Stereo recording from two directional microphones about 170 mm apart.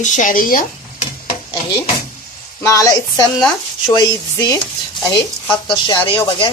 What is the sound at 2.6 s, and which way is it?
Speech, 20° left (ahead or behind).